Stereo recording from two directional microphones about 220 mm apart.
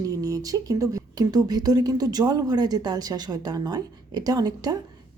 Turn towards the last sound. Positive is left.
turn(degrees=-15)  # may be behind; listen again after turning